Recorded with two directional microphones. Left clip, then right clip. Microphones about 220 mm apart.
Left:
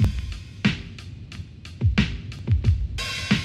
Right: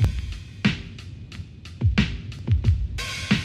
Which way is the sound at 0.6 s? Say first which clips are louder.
Even; centre (ahead or behind).